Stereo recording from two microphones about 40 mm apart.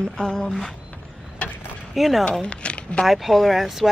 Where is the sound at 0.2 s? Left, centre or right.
Centre.